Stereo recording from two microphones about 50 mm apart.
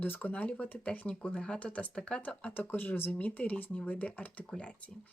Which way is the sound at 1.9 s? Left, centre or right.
Centre.